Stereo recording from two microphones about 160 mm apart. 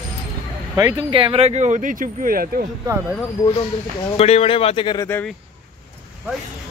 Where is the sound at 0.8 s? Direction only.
20° right (ahead or behind).